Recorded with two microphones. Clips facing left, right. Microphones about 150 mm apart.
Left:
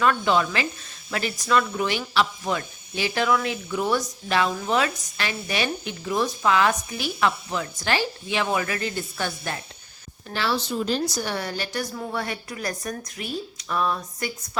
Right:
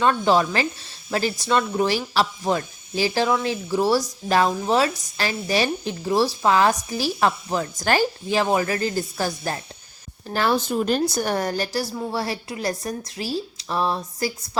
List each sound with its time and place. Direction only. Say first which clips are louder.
0.0 s speech: right 3 dB; 30° right (ahead or behind)
10.3 s speech: right 4 dB; 50° right (ahead or behind); by 14.3 s 30° right (ahead or behind)